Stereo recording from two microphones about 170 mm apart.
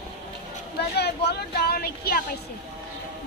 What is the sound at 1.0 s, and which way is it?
Speech, 75° left (ahead or behind).